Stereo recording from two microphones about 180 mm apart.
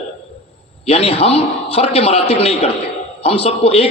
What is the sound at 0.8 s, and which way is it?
A man's voice, 35° left (ahead or behind).